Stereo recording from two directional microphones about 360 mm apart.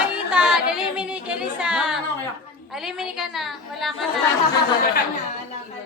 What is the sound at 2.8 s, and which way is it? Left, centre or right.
Speech, centre.